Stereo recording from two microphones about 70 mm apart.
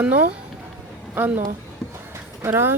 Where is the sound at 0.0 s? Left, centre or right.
Right.